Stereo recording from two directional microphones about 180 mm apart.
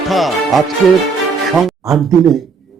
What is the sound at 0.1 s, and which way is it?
Speech, centre (ahead or behind).